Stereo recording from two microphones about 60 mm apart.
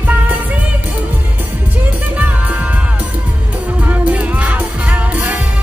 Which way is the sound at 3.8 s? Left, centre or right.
Right.